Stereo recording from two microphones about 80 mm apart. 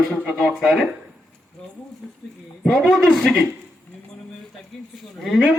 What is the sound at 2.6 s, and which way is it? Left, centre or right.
Speech, centre.